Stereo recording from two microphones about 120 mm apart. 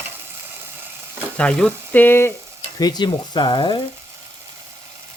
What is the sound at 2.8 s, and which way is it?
Speech, 35° left (ahead or behind).